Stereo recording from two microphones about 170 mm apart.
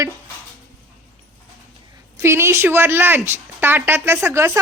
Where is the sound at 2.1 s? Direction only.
15° right (ahead or behind).